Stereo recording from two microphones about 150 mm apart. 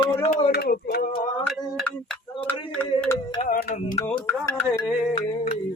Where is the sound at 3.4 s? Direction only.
60° left (ahead or behind).